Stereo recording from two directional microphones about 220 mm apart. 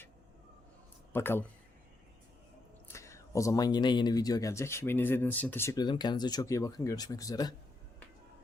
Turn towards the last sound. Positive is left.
turn(degrees=15)  # may be behind; listen again after turning